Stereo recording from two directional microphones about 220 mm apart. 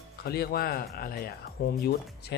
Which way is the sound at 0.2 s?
45° left (ahead or behind).